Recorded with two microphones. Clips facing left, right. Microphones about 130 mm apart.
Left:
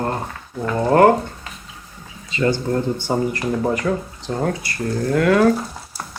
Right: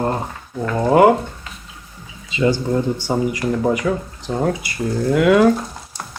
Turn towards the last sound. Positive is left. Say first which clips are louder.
# right 2 dB
turn(degrees=-15)  # may be behind; listen again after turning